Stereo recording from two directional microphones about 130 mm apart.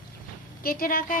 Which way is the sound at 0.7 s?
90° left.